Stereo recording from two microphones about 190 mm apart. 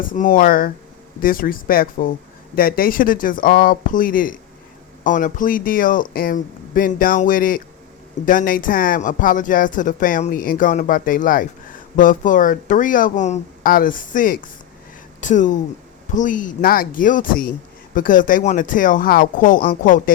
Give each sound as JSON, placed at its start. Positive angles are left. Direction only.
{"t": 0.0, "sound": "speech", "side_deg": 45}